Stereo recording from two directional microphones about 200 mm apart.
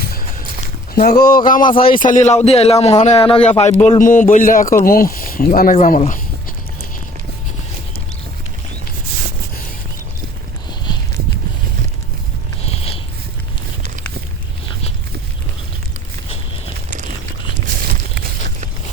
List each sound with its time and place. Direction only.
0.9 s speech: 45° left (ahead or behind)
1.6 s speech: 25° left (ahead or behind)
2.0 s a man's voice: 35° left (ahead or behind)
12.6 s sniff: 30° left (ahead or behind)
17.8 s a sound: 45° right (ahead or behind)